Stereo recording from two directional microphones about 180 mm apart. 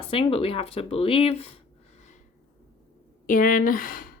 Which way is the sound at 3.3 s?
50° left (ahead or behind).